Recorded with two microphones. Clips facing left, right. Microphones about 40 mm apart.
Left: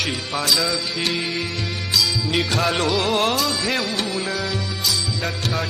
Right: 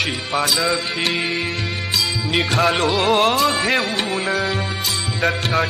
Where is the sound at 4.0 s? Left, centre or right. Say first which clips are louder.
Right 2 dB; right.